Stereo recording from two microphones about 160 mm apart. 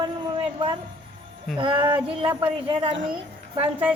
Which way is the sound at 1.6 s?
30° right (ahead or behind).